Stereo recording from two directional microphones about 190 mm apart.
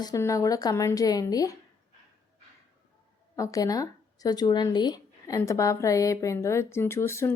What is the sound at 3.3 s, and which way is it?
Speech, 15° left (ahead or behind).